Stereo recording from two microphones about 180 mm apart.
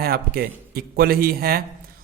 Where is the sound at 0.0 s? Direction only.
55° right (ahead or behind).